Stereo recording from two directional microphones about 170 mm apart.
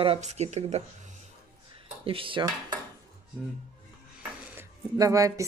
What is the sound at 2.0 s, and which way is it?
Speech, 30° right (ahead or behind).